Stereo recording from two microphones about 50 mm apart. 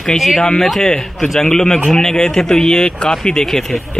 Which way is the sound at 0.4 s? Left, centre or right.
Centre.